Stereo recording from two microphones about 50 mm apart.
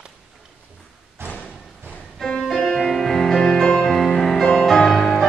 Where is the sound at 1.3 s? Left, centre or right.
Left.